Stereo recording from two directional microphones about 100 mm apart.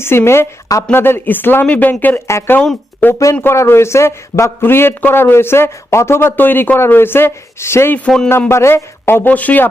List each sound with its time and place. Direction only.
0.0 s a man's voice: 25° left (ahead or behind)
3.0 s a man's voice: 15° left (ahead or behind)
3.5 s a man's voice: 25° left (ahead or behind)
7.9 s a man's voice: 10° left (ahead or behind)
8.3 s a man's voice: 25° left (ahead or behind)